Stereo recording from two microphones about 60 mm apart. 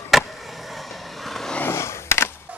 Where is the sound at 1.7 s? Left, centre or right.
Left.